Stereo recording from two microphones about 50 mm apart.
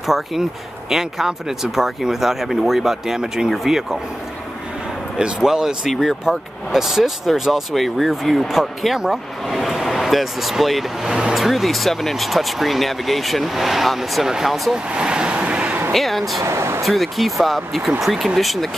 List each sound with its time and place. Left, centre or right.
0.0 s speech: centre
5.4 s speech: centre
15.0 s vehicle: centre
15.9 s speech: centre
16.4 s speech: right
16.8 s speech: centre